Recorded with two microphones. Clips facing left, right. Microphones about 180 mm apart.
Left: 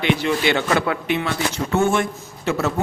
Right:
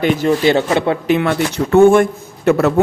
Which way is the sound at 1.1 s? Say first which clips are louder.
Right 7 dB; 65° right (ahead or behind).